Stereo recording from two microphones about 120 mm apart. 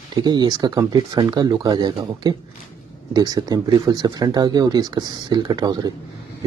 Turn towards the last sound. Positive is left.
turn(degrees=-35)  # may be behind; listen again after turning